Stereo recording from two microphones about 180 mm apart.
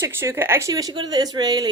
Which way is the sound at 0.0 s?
15° right (ahead or behind).